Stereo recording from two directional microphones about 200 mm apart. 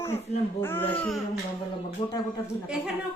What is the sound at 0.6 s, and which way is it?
Speech, 10° left (ahead or behind).